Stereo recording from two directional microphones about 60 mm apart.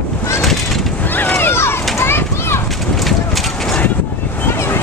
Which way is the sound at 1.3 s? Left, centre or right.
Left.